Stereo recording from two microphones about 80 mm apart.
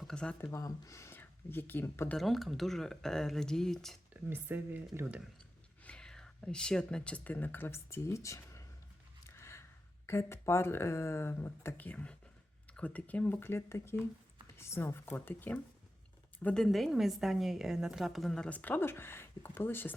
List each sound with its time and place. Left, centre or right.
0.0 s speech: centre
0.5 s speech: left
1.2 s speech: left
2.1 s a woman's voice: centre
4.1 s speech: right
5.8 s speech: centre; by 8.6 s left
9.2 s a sound: left
10.1 s speech: left
16.6 s a woman's voice: centre
18.4 s speech: centre